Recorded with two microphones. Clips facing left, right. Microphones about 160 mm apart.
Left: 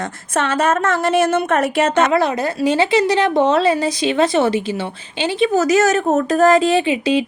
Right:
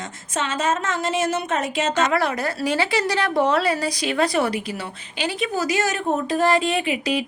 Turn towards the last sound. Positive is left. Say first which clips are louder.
# left 7 dB
turn(degrees=25)  # may be behind; listen again after turning